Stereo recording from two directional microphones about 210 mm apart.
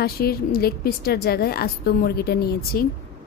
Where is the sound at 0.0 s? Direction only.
45° left (ahead or behind).